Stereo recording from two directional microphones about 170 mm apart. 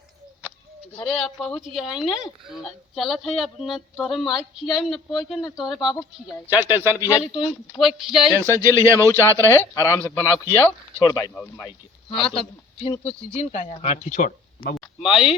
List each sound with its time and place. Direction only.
0.9 s a woman's voice: 5° left (ahead or behind); by 6.9 s 10° right (ahead or behind)
6.9 s speech: 20° left (ahead or behind)
7.3 s a woman's voice: centre (ahead or behind)
8.4 s speech: 15° right (ahead or behind)
9.5 s a man's voice: 15° left (ahead or behind)
12.1 s a man's voice: 30° left (ahead or behind); by 14.8 s 60° left (ahead or behind)
15.0 s a woman's voice: 5° right (ahead or behind)